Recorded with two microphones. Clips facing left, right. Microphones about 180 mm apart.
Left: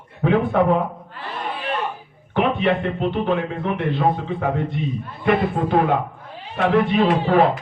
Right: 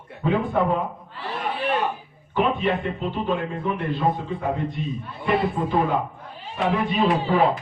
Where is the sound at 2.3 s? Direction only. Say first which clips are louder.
Left 3 dB; 70° left (ahead or behind).